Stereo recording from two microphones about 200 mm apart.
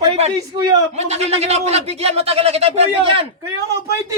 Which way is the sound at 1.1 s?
30° right (ahead or behind).